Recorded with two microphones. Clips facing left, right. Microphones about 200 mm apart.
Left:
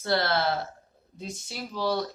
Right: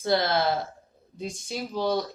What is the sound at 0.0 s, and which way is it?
A woman's voice, 15° right (ahead or behind).